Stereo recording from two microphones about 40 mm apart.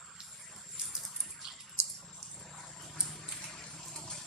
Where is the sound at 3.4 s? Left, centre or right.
Centre.